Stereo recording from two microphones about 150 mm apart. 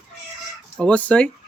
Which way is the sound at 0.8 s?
10° left (ahead or behind).